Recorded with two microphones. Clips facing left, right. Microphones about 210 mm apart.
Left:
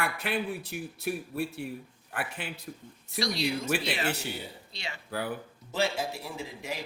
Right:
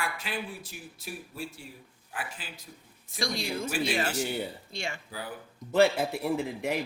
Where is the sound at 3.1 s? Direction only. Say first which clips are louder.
Left 2 dB; 50° right (ahead or behind).